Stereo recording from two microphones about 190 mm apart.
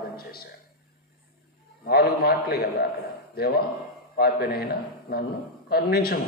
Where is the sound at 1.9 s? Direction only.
55° left (ahead or behind).